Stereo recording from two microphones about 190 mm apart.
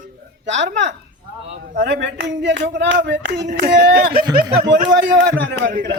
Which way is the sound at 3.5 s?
55° right (ahead or behind).